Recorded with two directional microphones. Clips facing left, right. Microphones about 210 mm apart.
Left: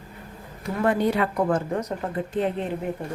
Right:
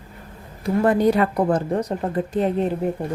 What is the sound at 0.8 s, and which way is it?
Speech, 40° right (ahead or behind).